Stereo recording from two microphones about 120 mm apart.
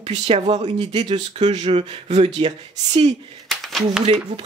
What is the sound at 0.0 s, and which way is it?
Speech, 60° right (ahead or behind).